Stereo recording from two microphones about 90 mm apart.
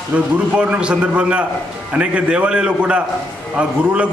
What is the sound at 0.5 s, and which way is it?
A man's voice, 10° right (ahead or behind).